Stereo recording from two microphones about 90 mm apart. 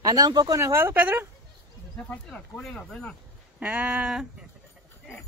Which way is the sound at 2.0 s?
15° left (ahead or behind).